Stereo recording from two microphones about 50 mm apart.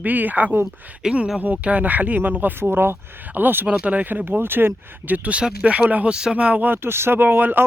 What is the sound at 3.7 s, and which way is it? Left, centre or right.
Speech, right.